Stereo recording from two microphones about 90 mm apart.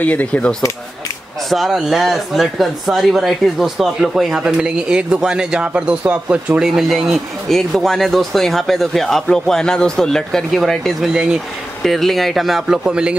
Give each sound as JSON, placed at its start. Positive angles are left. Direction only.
{"t": 0.0, "sound": "speech", "side_deg": 15}
{"t": 1.5, "sound": "speech", "side_deg": 0}